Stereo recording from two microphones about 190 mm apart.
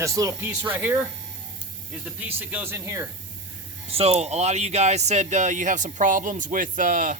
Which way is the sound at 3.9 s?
30° right (ahead or behind).